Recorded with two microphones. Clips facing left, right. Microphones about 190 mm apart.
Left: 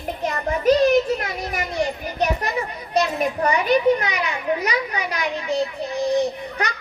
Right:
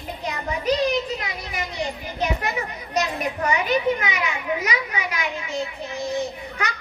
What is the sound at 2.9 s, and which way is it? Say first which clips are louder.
A child's voice: left 4 dB; 35° left (ahead or behind).